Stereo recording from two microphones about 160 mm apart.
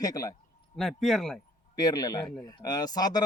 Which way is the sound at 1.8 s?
25° left (ahead or behind).